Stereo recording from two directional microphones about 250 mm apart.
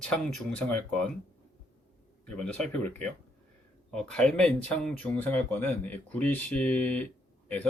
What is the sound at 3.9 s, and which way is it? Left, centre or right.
Speech, centre.